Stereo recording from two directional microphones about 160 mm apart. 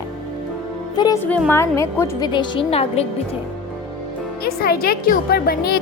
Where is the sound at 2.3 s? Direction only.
30° left (ahead or behind).